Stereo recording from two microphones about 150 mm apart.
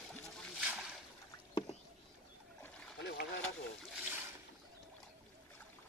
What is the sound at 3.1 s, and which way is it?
Boat, 90° left.